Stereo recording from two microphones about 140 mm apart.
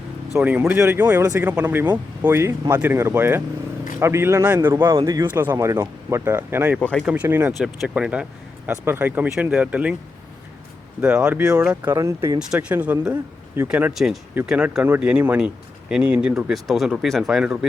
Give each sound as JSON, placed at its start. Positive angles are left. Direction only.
{"t": 0.3, "sound": "speech", "side_deg": -15}
{"t": 5.3, "sound": "speech", "side_deg": -15}
{"t": 6.7, "sound": "speech", "side_deg": 10}
{"t": 7.0, "sound": "speech", "side_deg": -10}
{"t": 11.0, "sound": "speech", "side_deg": -5}
{"t": 11.9, "sound": "speech", "side_deg": -20}
{"t": 12.4, "sound": "speech", "side_deg": -5}
{"t": 13.9, "sound": "speech", "side_deg": 0}